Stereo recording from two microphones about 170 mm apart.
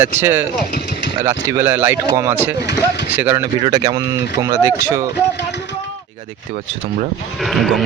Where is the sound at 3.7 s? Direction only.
25° right (ahead or behind).